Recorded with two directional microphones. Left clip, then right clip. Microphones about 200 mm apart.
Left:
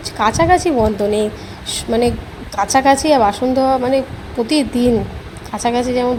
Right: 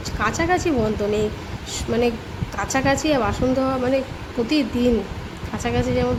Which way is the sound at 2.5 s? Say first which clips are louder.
Left 9 dB; 15° left (ahead or behind).